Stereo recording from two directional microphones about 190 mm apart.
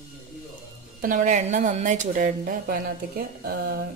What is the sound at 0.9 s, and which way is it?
Speech, 45° right (ahead or behind).